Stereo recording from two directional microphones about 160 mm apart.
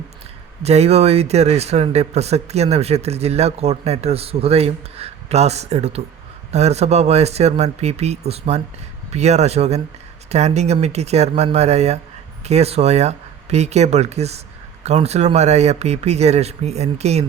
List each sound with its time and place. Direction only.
0.6 s speech: 40° right (ahead or behind)